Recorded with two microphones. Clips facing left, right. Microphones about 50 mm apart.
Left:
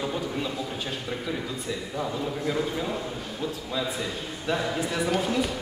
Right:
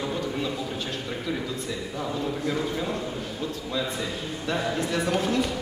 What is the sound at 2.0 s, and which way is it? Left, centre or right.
Speech, centre.